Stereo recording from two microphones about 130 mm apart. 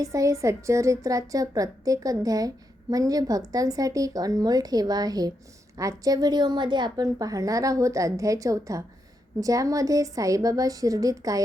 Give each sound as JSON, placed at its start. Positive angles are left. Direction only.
{"t": 0.0, "sound": "a woman's voice", "side_deg": -25}